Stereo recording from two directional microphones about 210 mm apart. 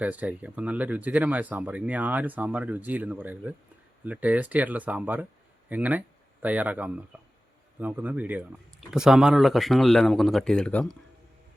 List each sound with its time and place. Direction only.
0.0 s speech: 5° right (ahead or behind)